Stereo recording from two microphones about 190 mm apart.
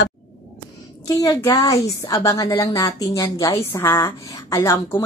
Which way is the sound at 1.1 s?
20° left (ahead or behind).